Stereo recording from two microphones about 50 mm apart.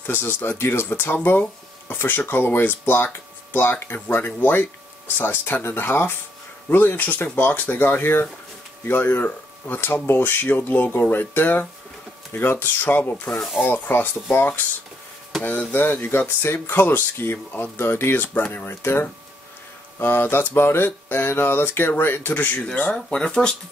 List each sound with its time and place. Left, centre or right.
0.0 s speech: left
10.4 s speech: left
15.7 s speech: left
23.0 s speech: centre